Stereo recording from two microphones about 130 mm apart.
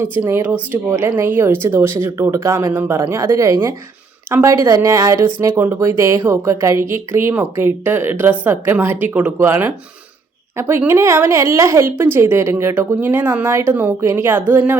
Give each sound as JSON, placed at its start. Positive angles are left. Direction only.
{"t": 0.0, "sound": "speech", "side_deg": -15}